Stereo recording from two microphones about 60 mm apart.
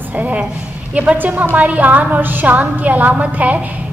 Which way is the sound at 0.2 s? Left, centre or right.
Right.